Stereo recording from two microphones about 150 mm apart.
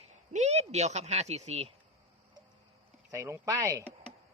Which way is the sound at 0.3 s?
45° right (ahead or behind).